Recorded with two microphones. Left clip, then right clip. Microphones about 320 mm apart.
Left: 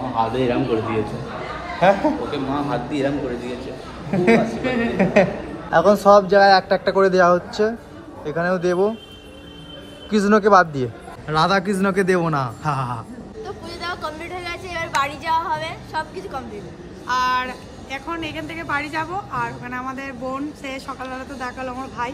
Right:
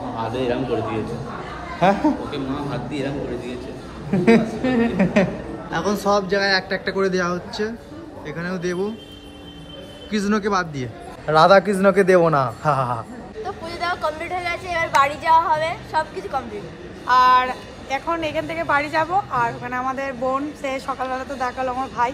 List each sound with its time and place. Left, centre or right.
0.2 s a woman's voice: centre
1.8 s speech: centre
2.3 s a woman's voice: centre
4.1 s a woman's voice: centre
10.1 s a man's voice: centre
11.3 s a woman's voice: centre